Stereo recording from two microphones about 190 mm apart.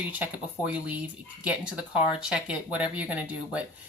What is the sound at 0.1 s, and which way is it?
Speech, 5° right (ahead or behind).